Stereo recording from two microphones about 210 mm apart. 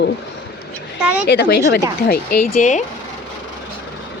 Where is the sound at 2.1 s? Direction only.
40° left (ahead or behind).